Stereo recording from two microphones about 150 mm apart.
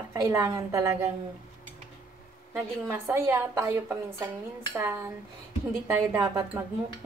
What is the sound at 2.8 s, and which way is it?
A woman's voice, 15° right (ahead or behind).